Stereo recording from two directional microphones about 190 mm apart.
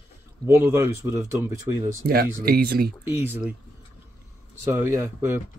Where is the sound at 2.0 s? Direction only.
55° right (ahead or behind).